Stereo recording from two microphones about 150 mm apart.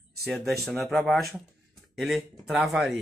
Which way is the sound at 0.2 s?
Centre (ahead or behind).